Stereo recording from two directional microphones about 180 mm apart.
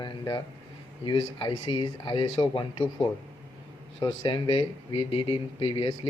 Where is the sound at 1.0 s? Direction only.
25° left (ahead or behind).